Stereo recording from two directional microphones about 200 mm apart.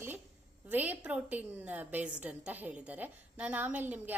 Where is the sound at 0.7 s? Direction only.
10° right (ahead or behind).